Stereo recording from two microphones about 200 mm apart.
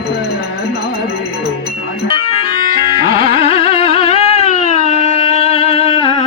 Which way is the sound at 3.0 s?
25° left (ahead or behind).